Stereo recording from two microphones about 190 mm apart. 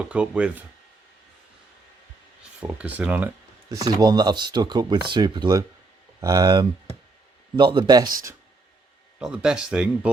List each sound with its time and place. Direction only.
0.0 s speech: 5° right (ahead or behind)
2.6 s speech: 5° right (ahead or behind)
9.1 s speech: 5° right (ahead or behind)